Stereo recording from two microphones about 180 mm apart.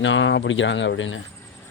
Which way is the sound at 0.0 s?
90° left.